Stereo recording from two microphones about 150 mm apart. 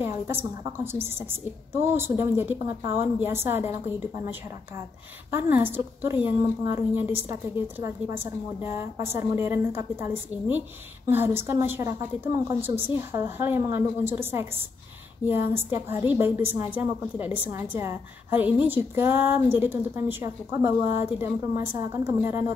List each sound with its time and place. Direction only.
0.0 s a sound: 15° right (ahead or behind)
0.9 s a woman's voice: 15° right (ahead or behind)
5.3 s a woman's voice: 15° right (ahead or behind)